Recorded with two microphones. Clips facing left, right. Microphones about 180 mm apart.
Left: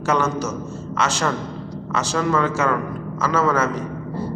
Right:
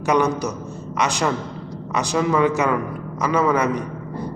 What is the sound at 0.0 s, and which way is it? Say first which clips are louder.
A man's voice: right 2 dB; 15° right (ahead or behind).